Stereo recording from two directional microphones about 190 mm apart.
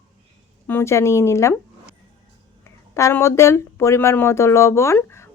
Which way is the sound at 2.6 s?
15° left (ahead or behind).